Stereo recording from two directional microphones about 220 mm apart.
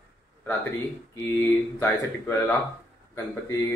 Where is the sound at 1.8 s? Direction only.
10° left (ahead or behind).